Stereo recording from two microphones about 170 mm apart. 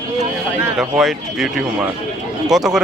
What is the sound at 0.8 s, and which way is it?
Speech, centre (ahead or behind).